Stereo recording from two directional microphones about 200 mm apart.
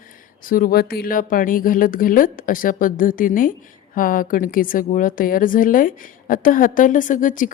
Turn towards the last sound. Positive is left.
turn(degrees=40)  # may be behind; listen again after turning